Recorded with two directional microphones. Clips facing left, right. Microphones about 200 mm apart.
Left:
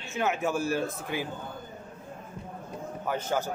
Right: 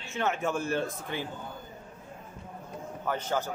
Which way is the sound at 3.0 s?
10° left (ahead or behind).